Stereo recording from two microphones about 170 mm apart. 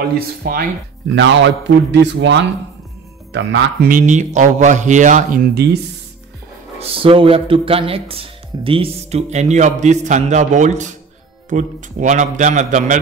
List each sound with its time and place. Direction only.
0.4 s speech: 60° right (ahead or behind)
1.1 s a man's voice: 90° right
3.9 s a man's voice: 45° right (ahead or behind); by 5.8 s 70° right (ahead or behind)
6.8 s a man's voice: 35° right (ahead or behind)